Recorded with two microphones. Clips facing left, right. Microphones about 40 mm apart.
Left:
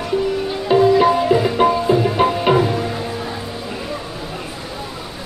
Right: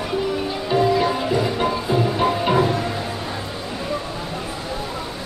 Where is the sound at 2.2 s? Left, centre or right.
Centre.